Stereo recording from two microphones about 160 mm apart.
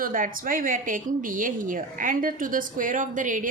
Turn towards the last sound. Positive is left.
turn(degrees=-55)  # may be behind; listen again after turning